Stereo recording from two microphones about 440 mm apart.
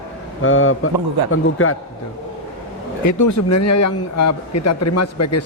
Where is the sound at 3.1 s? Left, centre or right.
Left.